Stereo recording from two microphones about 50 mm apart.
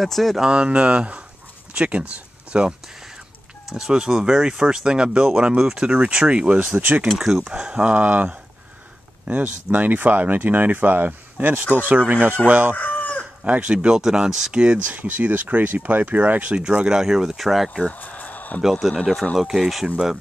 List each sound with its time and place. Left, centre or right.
0.0 s speech: centre
0.5 s speech: right
3.7 s speech: centre
7.1 s speech: centre; by 12.7 s right
12.7 s chicken: left
13.4 s speech: right
14.9 s speech: right
16.9 s speech: centre
17.9 s a sound: left
18.6 s speech: centre